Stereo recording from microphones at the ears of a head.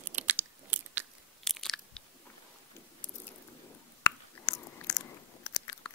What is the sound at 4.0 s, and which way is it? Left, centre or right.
Chewing, left.